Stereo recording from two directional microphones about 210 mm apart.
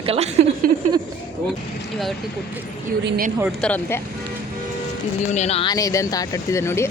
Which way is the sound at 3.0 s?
45° right (ahead or behind).